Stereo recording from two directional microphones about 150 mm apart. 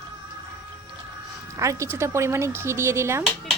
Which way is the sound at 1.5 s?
20° right (ahead or behind).